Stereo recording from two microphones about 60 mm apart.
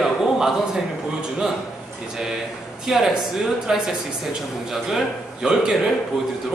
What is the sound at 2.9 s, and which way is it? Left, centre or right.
A man's voice, centre.